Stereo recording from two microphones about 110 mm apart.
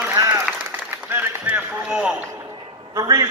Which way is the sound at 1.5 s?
10° right (ahead or behind).